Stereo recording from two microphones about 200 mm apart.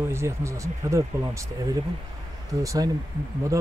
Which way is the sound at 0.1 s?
15° right (ahead or behind).